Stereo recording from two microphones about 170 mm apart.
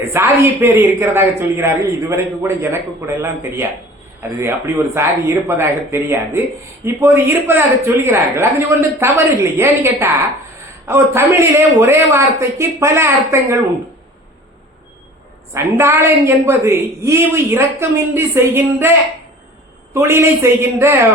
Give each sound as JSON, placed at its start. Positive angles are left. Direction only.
{"t": 0.0, "sound": "a man's voice", "side_deg": -15}
{"t": 15.5, "sound": "a man's voice", "side_deg": -15}
{"t": 19.9, "sound": "a man's voice", "side_deg": -15}